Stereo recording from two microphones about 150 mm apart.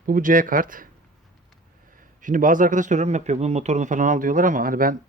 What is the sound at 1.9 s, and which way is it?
A man's voice, 60° right (ahead or behind).